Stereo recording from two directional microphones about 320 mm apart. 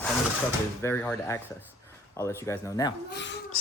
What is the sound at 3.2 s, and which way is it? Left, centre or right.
Speech, left.